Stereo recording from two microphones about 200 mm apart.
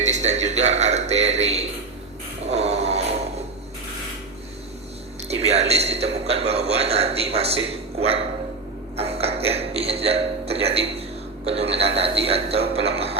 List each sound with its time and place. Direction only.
0.0 s a man's voice: 35° right (ahead or behind)
2.5 s a sound: 35° right (ahead or behind)
5.3 s a man's voice: 30° right (ahead or behind)